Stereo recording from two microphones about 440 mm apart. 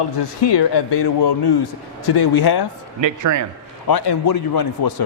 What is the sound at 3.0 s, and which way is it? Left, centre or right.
Speech, right.